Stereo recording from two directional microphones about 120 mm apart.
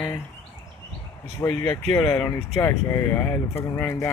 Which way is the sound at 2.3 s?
25° left (ahead or behind).